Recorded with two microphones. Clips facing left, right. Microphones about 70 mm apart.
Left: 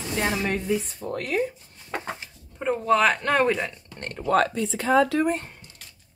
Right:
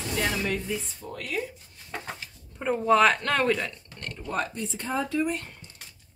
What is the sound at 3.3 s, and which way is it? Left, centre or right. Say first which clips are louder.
Speech: left 3 dB; centre.